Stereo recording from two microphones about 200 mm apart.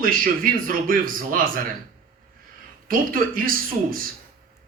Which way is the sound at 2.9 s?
45° right (ahead or behind).